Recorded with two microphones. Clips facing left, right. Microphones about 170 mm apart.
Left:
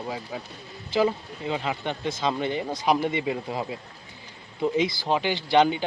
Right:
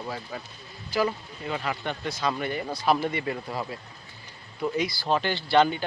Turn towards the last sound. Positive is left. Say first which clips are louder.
# left 1 dB
turn(degrees=15)  # may be behind; listen again after turning